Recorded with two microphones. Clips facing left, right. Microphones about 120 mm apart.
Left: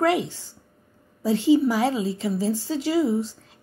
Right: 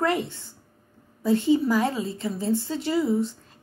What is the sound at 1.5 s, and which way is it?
Speech, 10° left (ahead or behind).